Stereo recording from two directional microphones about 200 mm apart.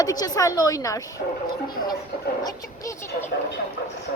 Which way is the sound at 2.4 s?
15° left (ahead or behind).